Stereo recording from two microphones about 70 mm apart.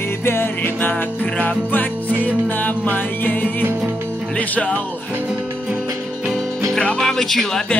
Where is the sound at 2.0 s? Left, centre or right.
Right.